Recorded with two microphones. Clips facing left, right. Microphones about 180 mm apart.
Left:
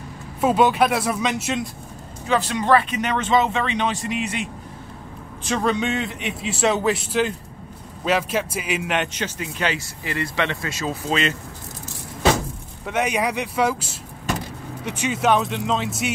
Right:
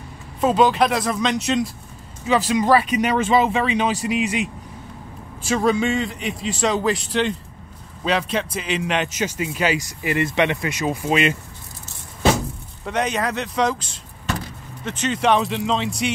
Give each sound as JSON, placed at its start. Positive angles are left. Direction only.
{"t": 0.4, "sound": "a man's voice", "side_deg": 5}
{"t": 2.2, "sound": "speech", "side_deg": -10}
{"t": 5.5, "sound": "a man's voice", "side_deg": -5}
{"t": 12.8, "sound": "a man's voice", "side_deg": 10}